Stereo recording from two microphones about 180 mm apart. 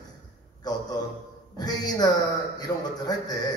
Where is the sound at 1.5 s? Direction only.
20° left (ahead or behind).